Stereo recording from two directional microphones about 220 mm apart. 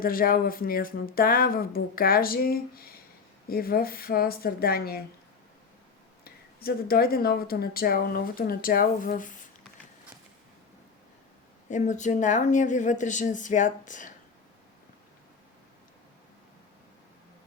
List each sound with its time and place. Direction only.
0.0 s speech: 40° left (ahead or behind)
6.2 s speech: 45° left (ahead or behind)
11.7 s speech: 35° left (ahead or behind)